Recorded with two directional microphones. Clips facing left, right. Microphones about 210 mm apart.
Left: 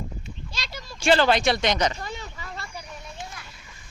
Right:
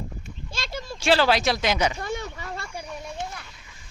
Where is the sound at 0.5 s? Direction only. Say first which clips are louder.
Right 7 dB; 50° right (ahead or behind).